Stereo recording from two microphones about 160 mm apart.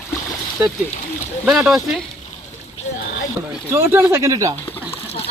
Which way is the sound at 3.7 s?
15° right (ahead or behind).